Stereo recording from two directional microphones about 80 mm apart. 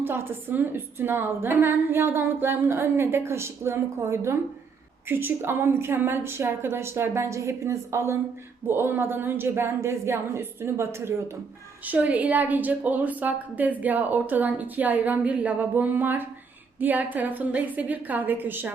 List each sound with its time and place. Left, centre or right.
0.0 s a woman's voice: right
11.9 s a woman's voice: centre